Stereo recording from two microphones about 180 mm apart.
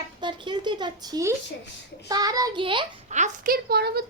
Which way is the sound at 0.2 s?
25° right (ahead or behind).